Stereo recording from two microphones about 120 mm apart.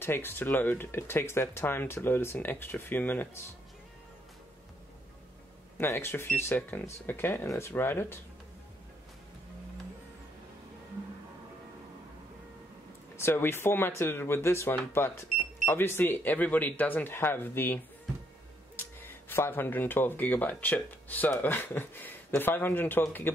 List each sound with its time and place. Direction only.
0.0 s speech: 20° left (ahead or behind)
5.8 s speech: 20° left (ahead or behind)
13.1 s speech: 20° left (ahead or behind)
18.8 s speech: 15° left (ahead or behind)